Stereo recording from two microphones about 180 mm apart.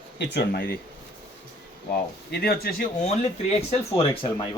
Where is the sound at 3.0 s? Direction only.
35° left (ahead or behind).